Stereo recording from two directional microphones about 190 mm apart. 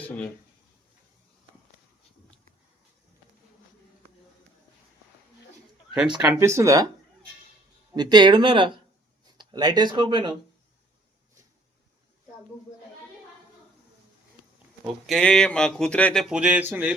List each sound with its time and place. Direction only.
0.0 s speech: 10° left (ahead or behind)
6.1 s speech: 15° right (ahead or behind)
7.9 s speech: 20° right (ahead or behind)
15.0 s speech: centre (ahead or behind)